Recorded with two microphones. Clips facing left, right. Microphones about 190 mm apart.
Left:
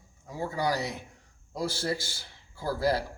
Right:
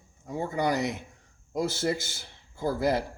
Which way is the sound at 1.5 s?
20° right (ahead or behind).